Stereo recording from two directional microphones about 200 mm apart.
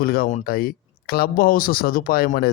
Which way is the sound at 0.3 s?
35° left (ahead or behind).